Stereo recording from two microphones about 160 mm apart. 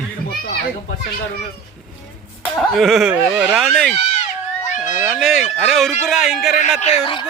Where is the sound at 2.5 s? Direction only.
Centre (ahead or behind).